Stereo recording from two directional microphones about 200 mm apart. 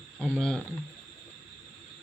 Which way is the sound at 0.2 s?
5° left (ahead or behind).